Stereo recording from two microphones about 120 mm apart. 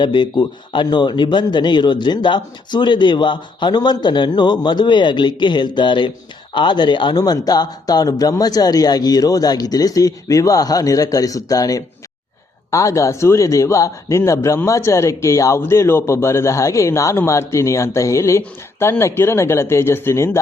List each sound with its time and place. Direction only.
0.0 s a man's voice: 40° left (ahead or behind); by 20.4 s 20° left (ahead or behind)